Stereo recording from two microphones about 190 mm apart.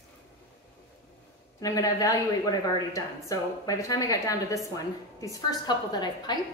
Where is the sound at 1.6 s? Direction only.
20° left (ahead or behind).